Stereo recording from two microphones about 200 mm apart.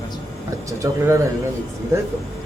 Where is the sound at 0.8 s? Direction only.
15° right (ahead or behind).